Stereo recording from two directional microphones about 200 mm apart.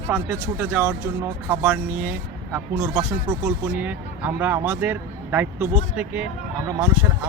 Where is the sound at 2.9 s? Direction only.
20° right (ahead or behind).